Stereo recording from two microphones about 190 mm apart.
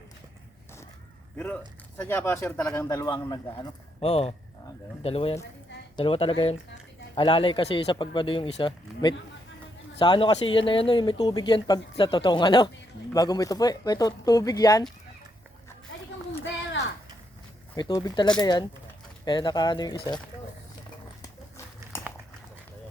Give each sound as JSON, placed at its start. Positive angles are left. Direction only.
{"t": 2.0, "sound": "speech", "side_deg": 10}
{"t": 17.7, "sound": "speech", "side_deg": 20}
{"t": 21.9, "sound": "a sound", "side_deg": 10}